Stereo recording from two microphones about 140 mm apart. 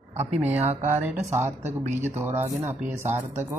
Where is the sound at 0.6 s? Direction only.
50° right (ahead or behind).